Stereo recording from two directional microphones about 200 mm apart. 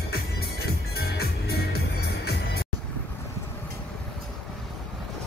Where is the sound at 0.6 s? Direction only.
50° left (ahead or behind).